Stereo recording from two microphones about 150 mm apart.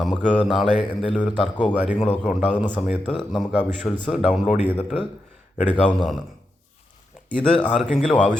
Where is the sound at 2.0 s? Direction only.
5° left (ahead or behind).